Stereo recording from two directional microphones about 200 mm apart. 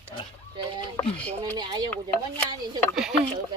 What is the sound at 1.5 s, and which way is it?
Speech, 20° right (ahead or behind).